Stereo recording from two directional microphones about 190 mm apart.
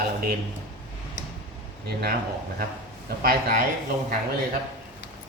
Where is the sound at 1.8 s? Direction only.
55° right (ahead or behind).